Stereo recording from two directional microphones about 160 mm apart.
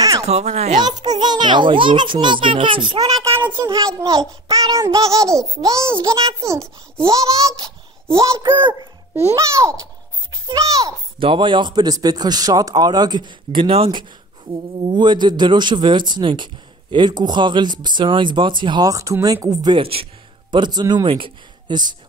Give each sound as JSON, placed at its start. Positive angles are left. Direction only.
{"t": 0.2, "sound": "speech", "side_deg": -40}
{"t": 0.7, "sound": "a child's voice", "side_deg": -25}
{"t": 7.1, "sound": "a child's voice", "side_deg": -20}
{"t": 9.1, "sound": "a child's voice", "side_deg": -20}
{"t": 11.1, "sound": "a child's voice", "side_deg": -30}